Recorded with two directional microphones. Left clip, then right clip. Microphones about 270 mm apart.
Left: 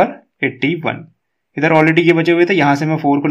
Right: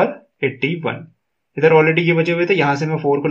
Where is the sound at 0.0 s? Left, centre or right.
Left.